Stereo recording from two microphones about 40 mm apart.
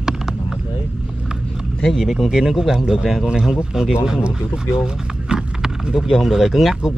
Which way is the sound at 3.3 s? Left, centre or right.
Centre.